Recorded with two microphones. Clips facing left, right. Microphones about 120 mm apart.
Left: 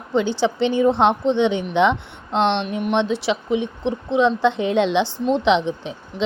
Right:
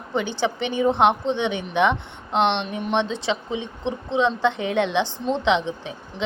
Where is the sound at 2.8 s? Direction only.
15° left (ahead or behind).